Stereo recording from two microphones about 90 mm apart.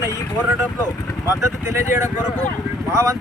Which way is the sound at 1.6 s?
30° right (ahead or behind).